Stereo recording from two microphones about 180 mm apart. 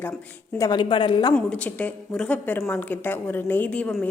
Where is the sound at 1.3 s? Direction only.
5° left (ahead or behind).